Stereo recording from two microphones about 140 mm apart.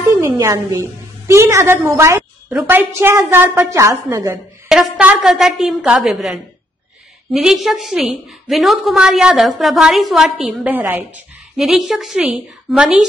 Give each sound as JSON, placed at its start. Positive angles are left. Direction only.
{"t": 0.1, "sound": "a woman's voice", "side_deg": -20}
{"t": 4.6, "sound": "a woman's voice", "side_deg": -5}
{"t": 11.5, "sound": "a woman's voice", "side_deg": 0}